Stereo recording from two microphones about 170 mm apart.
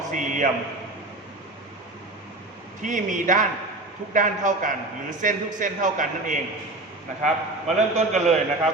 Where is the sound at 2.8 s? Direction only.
50° right (ahead or behind).